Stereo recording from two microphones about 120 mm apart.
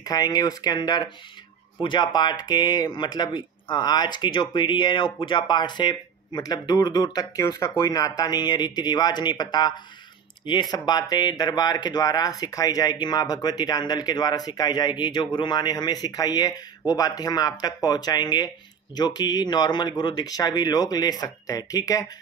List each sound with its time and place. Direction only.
0.0 s speech: 35° left (ahead or behind)